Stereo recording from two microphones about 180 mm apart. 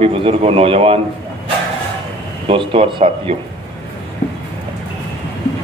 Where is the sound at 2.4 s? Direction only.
30° right (ahead or behind).